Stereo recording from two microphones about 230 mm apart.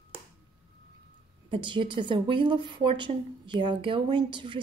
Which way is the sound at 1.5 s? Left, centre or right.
Right.